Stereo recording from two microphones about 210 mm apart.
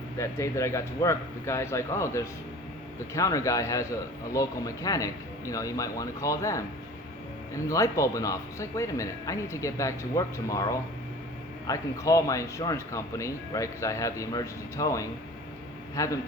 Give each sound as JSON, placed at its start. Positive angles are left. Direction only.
{"t": 0.2, "sound": "speech", "side_deg": 15}